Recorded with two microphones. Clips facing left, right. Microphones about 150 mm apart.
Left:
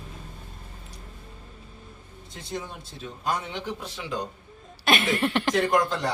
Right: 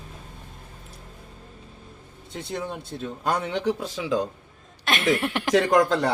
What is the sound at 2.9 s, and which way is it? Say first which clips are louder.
Speech: right 5 dB; 60° right (ahead or behind).